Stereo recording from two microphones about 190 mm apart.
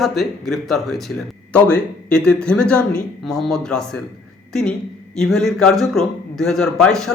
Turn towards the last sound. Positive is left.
turn(degrees=5)  # may be behind; listen again after turning